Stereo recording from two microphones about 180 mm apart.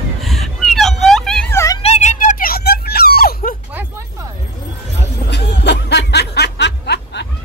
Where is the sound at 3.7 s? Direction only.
10° right (ahead or behind).